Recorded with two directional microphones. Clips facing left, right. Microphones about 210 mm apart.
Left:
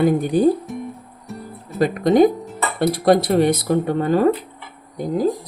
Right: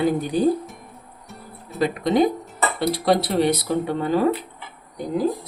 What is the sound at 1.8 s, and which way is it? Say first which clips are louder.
Speech: left 5 dB; 50° left (ahead or behind).